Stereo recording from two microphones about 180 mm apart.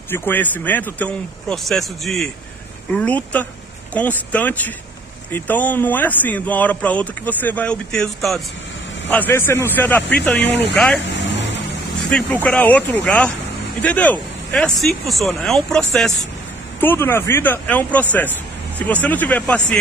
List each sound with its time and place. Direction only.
0.1 s speech: 10° left (ahead or behind)
10.4 s speech: 70° left (ahead or behind)
10.7 s speech: 5° left (ahead or behind)
11.1 s vehicle: 80° left
12.1 s speech: 5° left (ahead or behind)